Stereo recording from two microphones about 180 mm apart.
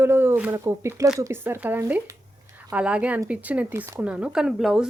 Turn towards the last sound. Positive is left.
turn(degrees=0)  # may be behind; listen again after turning